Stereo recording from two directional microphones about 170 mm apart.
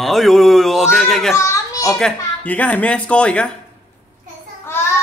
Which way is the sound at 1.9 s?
5° left (ahead or behind).